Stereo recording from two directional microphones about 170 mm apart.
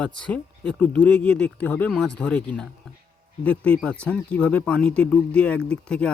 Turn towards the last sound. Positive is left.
turn(degrees=5)  # may be behind; listen again after turning